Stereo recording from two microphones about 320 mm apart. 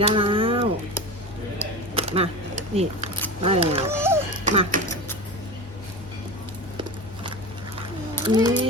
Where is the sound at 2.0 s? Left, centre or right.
Centre.